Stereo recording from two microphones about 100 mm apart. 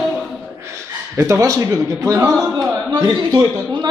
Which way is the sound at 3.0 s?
40° right (ahead or behind).